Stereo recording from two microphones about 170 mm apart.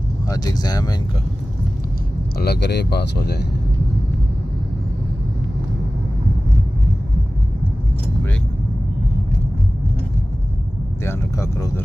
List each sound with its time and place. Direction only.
0.3 s speech: 20° left (ahead or behind)
2.3 s speech: 70° left (ahead or behind)
11.1 s speech: 15° left (ahead or behind)